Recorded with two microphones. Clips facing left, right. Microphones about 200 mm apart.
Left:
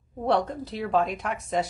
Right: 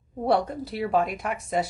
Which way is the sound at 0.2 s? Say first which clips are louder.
Right 1 dB; 10° right (ahead or behind).